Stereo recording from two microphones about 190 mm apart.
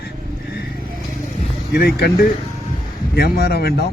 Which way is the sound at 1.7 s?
55° left (ahead or behind).